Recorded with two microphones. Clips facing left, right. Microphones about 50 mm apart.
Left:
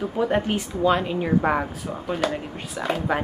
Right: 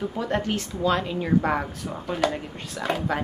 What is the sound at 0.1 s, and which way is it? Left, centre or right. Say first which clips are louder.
A woman's voice: left 4 dB; centre.